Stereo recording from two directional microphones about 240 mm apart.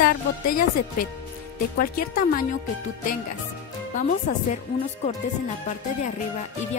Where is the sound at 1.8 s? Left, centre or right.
Left.